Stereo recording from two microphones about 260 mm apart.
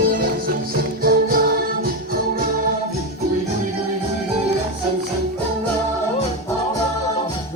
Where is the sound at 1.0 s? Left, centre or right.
Right.